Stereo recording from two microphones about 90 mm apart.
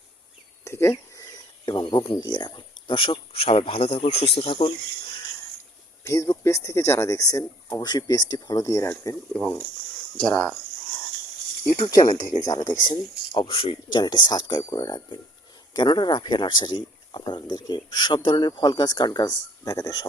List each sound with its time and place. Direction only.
0.6 s a sound: 30° left (ahead or behind)
1.6 s speech: 55° left (ahead or behind); by 4.7 s 85° left
6.1 s speech: 35° left (ahead or behind)
9.3 s speech: 10° left (ahead or behind)
11.9 s speech: 45° left (ahead or behind)
13.3 s speech: 65° left (ahead or behind)
14.0 s speech: 50° left (ahead or behind)